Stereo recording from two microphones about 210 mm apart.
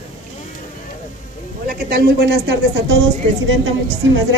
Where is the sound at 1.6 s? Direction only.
45° right (ahead or behind).